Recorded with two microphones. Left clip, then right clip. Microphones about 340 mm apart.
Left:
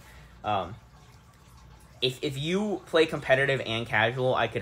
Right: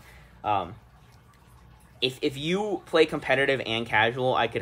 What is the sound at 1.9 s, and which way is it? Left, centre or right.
Speech, right.